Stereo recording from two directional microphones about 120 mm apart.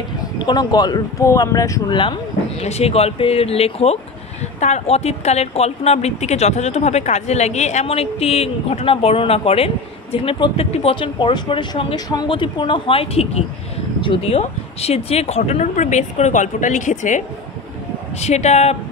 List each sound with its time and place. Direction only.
0.5 s speech: 35° left (ahead or behind)
2.6 s a woman's voice: 60° left (ahead or behind)
4.6 s a woman's voice: 70° left (ahead or behind); by 17.2 s 90° left
18.2 s speech: 70° left (ahead or behind)